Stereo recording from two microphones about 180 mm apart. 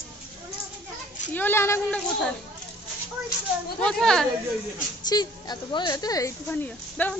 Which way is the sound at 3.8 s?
5° left (ahead or behind).